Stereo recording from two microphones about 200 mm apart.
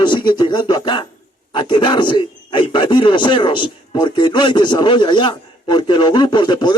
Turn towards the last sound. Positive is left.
turn(degrees=20)  # may be behind; listen again after turning